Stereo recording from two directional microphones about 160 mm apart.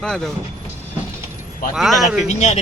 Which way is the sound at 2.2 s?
45° left (ahead or behind).